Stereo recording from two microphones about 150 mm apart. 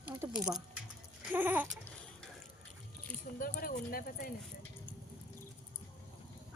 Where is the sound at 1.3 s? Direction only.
10° right (ahead or behind).